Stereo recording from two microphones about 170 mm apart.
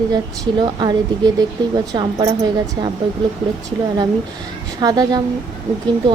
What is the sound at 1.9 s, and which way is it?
Speech, 20° right (ahead or behind).